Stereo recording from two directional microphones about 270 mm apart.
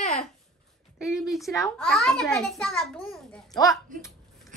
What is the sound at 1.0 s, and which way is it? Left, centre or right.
A child's voice, centre.